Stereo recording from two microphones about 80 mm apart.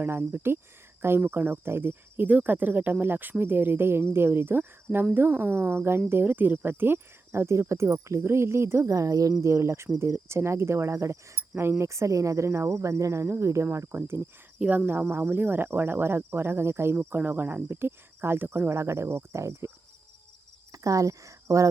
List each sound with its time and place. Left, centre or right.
0.0 s speech: right
8.9 s speech: right
14.6 s speech: centre
15.1 s speech: right
20.7 s speech: right